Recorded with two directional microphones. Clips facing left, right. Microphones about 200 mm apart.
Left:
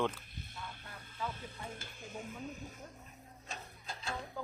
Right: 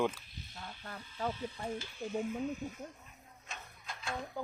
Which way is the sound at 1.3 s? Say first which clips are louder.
Right 7 dB; 50° left (ahead or behind).